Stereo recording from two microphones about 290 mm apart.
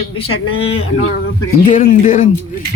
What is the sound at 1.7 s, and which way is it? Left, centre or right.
Speech, left.